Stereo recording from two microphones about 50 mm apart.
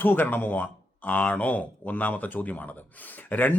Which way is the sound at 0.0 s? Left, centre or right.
Left.